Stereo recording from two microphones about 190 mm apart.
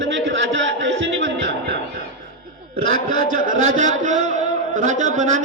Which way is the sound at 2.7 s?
45° right (ahead or behind).